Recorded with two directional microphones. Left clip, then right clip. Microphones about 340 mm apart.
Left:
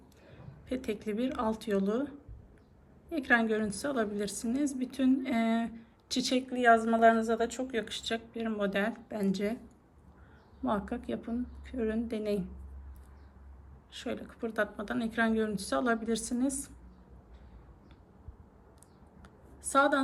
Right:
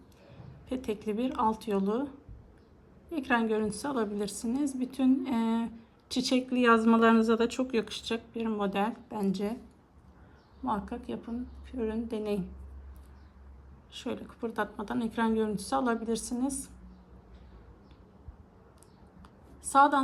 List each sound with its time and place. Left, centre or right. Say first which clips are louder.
0.7 s a woman's voice: right 1 dB; centre
7.3 s speech: right 3 dB; right
7.7 s a woman's voice: right 2 dB; centre
10.7 s a woman's voice: even; centre
13.9 s a woman's voice: right 1 dB; centre
19.7 s a woman's voice: right 4 dB; centre